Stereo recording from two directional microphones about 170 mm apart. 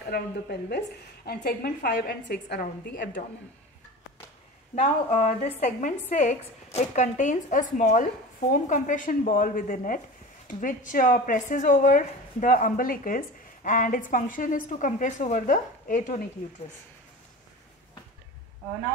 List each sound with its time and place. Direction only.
0.0 s a woman's voice: 65° left (ahead or behind)
4.7 s a woman's voice: 40° left (ahead or behind)